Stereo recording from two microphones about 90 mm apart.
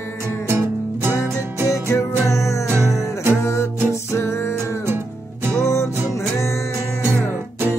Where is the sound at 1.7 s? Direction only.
35° left (ahead or behind).